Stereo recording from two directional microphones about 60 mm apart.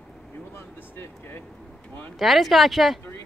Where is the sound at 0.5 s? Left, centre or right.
Left.